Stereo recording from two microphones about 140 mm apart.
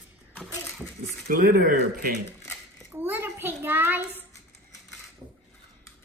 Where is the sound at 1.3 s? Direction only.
90° right.